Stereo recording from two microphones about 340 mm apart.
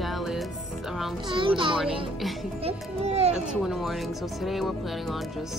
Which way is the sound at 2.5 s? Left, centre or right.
Centre.